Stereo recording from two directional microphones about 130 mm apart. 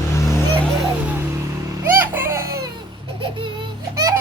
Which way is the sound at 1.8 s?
15° right (ahead or behind).